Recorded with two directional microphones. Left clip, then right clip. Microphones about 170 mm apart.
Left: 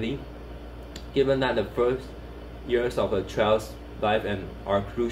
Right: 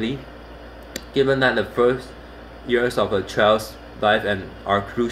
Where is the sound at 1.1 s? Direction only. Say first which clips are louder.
Right 5 dB; 50° right (ahead or behind).